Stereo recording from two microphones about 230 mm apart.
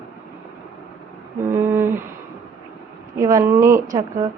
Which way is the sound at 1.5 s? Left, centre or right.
Centre.